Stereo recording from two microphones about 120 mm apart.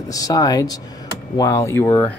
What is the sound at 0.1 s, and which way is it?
Speech, 30° left (ahead or behind).